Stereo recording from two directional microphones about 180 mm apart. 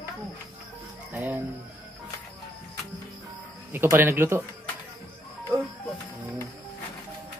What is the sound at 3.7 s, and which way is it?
Speech, 10° right (ahead or behind).